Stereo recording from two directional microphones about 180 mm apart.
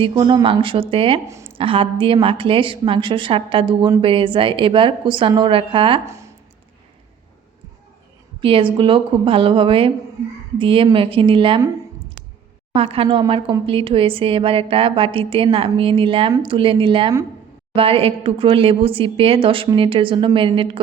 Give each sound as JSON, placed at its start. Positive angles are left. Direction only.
{"t": 0.0, "sound": "a woman's voice", "side_deg": -30}
{"t": 8.4, "sound": "a woman's voice", "side_deg": -30}
{"t": 12.7, "sound": "a woman's voice", "side_deg": -30}